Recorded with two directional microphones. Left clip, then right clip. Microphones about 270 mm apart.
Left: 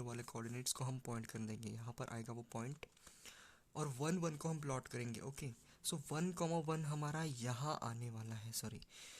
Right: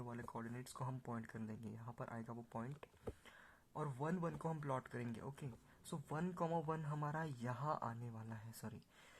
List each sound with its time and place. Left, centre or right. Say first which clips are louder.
0.0 s speech: left 1 dB; left